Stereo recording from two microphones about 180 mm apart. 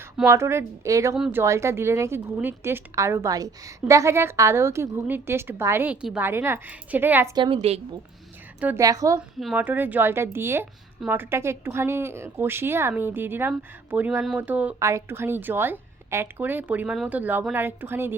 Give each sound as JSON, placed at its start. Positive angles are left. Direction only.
{"t": 0.3, "sound": "a woman's voice", "side_deg": -15}
{"t": 1.1, "sound": "speech", "side_deg": -5}
{"t": 1.4, "sound": "a woman's voice", "side_deg": -15}
{"t": 7.3, "sound": "a woman's voice", "side_deg": -30}
{"t": 8.6, "sound": "a woman's voice", "side_deg": -15}
{"t": 9.4, "sound": "a woman's voice", "side_deg": -5}